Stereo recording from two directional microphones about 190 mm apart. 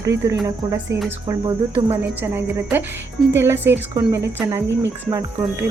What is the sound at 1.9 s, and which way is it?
Speech, 10° right (ahead or behind).